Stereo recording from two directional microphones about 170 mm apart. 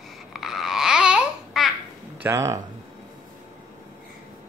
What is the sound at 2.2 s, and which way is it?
Speech, 15° right (ahead or behind).